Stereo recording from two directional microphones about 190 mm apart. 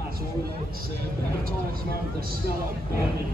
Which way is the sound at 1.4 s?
50° right (ahead or behind).